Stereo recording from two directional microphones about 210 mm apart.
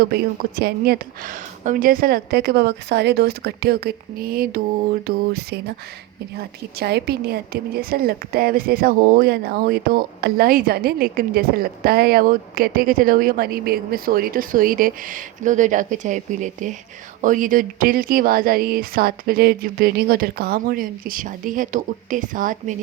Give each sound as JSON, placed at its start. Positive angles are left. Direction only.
{"t": 0.0, "sound": "a woman's voice", "side_deg": -45}